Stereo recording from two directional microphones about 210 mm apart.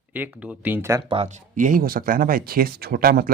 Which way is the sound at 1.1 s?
30° right (ahead or behind).